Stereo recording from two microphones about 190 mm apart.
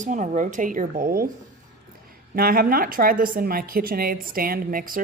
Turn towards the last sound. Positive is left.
turn(degrees=-45)  # may be behind; listen again after turning